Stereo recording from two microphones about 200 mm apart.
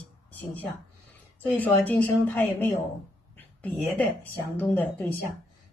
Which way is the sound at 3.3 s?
10° left (ahead or behind).